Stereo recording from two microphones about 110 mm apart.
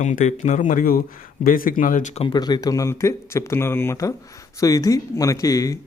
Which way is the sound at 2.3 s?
35° left (ahead or behind).